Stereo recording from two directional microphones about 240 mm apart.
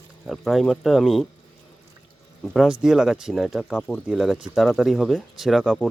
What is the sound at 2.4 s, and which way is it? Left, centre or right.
Speech, centre.